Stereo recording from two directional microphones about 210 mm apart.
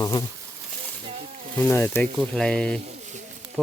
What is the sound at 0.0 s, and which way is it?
Speech, 20° left (ahead or behind).